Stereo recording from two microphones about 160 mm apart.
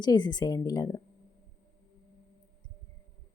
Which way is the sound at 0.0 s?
25° left (ahead or behind).